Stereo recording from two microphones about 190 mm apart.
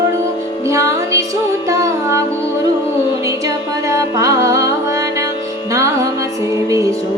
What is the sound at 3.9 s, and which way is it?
Music, 15° right (ahead or behind).